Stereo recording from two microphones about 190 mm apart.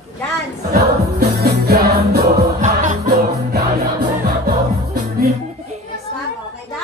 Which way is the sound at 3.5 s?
55° right (ahead or behind).